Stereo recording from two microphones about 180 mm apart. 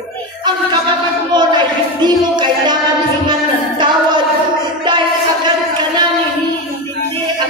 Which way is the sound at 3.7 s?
25° right (ahead or behind).